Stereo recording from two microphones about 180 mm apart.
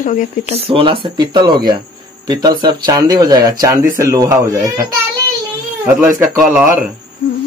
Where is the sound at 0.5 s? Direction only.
30° right (ahead or behind).